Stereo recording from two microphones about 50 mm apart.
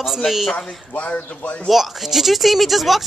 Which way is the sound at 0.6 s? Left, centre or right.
Left.